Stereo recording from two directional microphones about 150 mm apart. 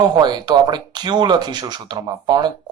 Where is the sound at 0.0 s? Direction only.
30° right (ahead or behind).